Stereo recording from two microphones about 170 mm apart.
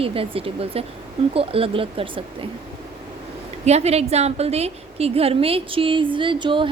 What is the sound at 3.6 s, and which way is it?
A woman's voice, 40° right (ahead or behind).